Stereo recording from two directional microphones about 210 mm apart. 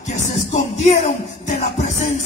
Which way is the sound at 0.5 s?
35° left (ahead or behind).